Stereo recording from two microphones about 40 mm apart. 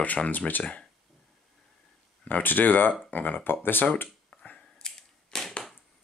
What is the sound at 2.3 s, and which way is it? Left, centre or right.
Speech, left.